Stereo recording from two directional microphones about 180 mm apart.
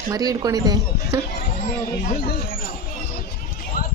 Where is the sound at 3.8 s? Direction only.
50° left (ahead or behind).